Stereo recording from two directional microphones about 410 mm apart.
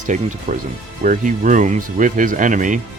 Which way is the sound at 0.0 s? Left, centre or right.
Centre.